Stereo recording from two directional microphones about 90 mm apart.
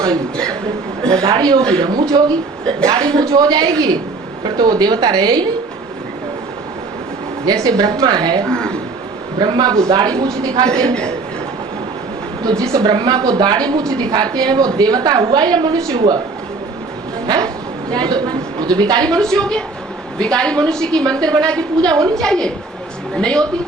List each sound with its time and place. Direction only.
1.1 s a woman's voice: 50° right (ahead or behind)
7.4 s a woman's voice: 50° right (ahead or behind)
8.4 s speech: 10° left (ahead or behind)
9.4 s a woman's voice: 50° right (ahead or behind)
10.7 s a woman's voice: 10° left (ahead or behind)
12.5 s a woman's voice: 50° right (ahead or behind)
17.2 s a woman's voice: 50° right (ahead or behind)
19.0 s a woman's voice: 10° left (ahead or behind)
21.8 s a woman's voice: 45° right (ahead or behind)
22.2 s a woman's voice: 10° left (ahead or behind)